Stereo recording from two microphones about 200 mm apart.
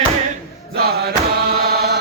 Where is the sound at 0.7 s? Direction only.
50° right (ahead or behind).